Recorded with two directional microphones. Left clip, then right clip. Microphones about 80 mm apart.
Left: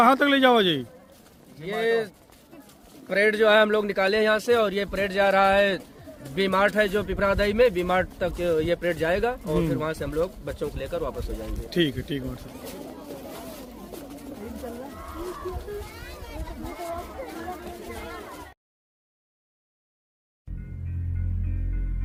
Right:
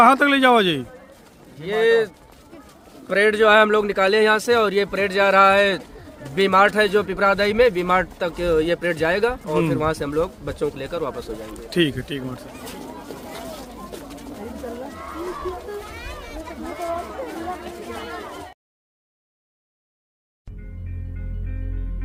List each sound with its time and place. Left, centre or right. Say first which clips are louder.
0.0 s speech: right 4 dB; centre
3.1 s speech: right 4 dB; centre
11.9 s speech: right 3 dB; centre
14.8 s a sound: right 5 dB; centre
15.9 s children playing: right 6 dB; centre
17.1 s chatter: right 6 dB; centre